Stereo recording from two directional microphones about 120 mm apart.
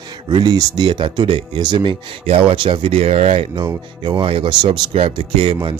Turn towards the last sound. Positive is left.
turn(degrees=-45)  # may be behind; listen again after turning